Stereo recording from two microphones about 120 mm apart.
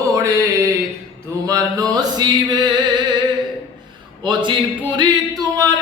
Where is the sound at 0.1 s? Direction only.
25° right (ahead or behind).